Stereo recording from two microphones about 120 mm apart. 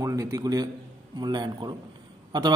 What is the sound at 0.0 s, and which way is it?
A man's voice, 30° right (ahead or behind).